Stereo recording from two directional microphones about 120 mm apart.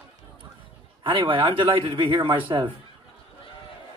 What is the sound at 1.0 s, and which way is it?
A man's voice, 45° right (ahead or behind).